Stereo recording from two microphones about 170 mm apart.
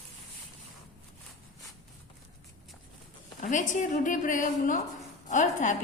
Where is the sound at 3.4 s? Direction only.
45° left (ahead or behind).